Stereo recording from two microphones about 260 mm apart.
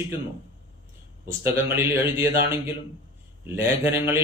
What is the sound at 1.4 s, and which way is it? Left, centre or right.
Speech, centre.